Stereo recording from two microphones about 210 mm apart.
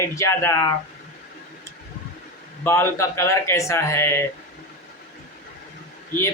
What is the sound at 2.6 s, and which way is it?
A man's voice, 10° left (ahead or behind).